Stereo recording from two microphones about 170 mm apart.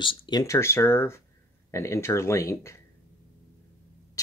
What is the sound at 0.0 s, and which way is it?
Speech, 25° left (ahead or behind).